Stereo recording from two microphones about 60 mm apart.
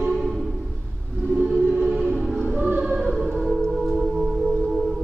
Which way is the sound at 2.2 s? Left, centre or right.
Centre.